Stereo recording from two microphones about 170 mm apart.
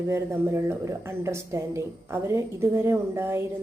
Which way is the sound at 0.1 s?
15° right (ahead or behind).